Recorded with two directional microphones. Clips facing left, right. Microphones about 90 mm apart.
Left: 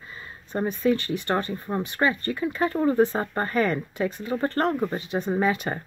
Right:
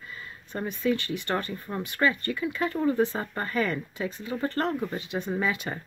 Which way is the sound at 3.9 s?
55° left (ahead or behind).